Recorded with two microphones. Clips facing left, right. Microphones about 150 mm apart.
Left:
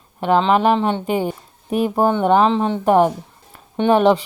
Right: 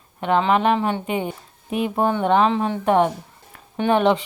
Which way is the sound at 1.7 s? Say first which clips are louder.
Left 4 dB; 40° left (ahead or behind).